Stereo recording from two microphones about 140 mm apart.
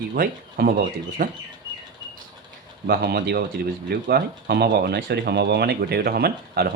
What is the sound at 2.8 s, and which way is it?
Speech, 90° right.